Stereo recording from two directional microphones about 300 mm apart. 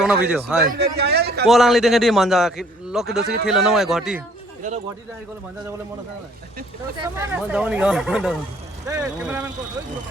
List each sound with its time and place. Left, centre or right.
0.0 s a man's voice: centre
0.7 s a man's voice: right
1.5 s a man's voice: centre
7.0 s a man's voice: centre